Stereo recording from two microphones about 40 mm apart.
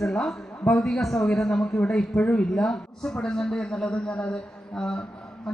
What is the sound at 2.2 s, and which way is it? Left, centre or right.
Speech, left.